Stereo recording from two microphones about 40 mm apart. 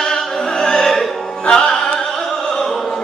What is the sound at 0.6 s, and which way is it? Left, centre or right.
Opera, centre.